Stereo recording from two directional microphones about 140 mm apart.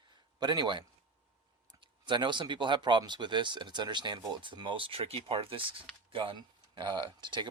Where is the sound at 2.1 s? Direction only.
35° right (ahead or behind).